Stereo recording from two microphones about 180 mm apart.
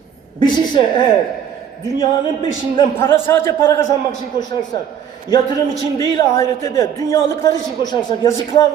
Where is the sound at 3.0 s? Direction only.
15° left (ahead or behind).